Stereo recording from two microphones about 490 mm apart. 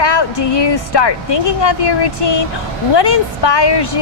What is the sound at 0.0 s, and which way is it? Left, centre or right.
A woman's voice, left.